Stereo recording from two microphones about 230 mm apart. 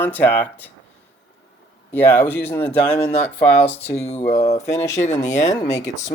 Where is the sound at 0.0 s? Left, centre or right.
Centre.